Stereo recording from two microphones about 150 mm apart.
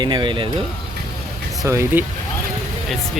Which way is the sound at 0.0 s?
30° right (ahead or behind).